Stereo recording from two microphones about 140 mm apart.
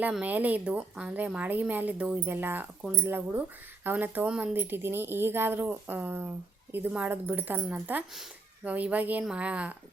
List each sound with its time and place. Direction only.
0.0 s a woman's voice: 10° right (ahead or behind)